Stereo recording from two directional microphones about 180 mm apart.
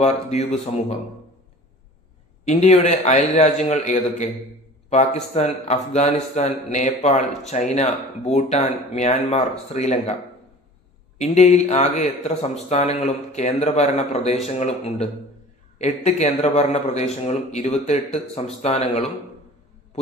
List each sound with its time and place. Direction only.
0.0 s a man's voice: 40° left (ahead or behind)
2.4 s a man's voice: 40° left (ahead or behind)
11.2 s a man's voice: 40° left (ahead or behind)